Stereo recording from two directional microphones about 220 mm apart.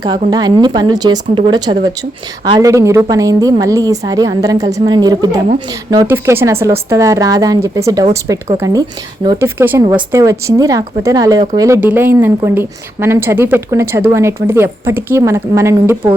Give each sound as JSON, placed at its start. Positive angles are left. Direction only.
{"t": 0.0, "sound": "a woman's voice", "side_deg": -20}